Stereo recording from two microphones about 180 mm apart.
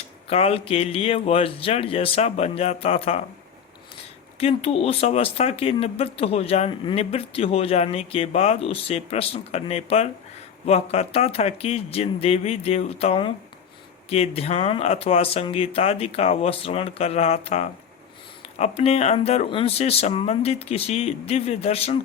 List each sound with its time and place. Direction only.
0.3 s speech: 35° left (ahead or behind)
4.4 s speech: 35° left (ahead or behind)